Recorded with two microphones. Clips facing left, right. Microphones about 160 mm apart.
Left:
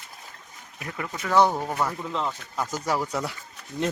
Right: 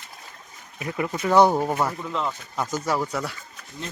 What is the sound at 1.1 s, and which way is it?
Speech, 25° right (ahead or behind).